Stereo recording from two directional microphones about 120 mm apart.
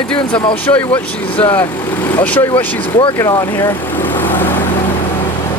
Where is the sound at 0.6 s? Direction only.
15° left (ahead or behind).